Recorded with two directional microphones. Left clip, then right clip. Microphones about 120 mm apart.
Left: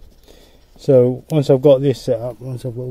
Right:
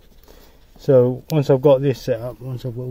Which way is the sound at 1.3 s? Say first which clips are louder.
Left 2 dB; 30° left (ahead or behind).